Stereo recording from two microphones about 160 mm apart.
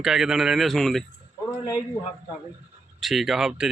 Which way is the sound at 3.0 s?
Centre (ahead or behind).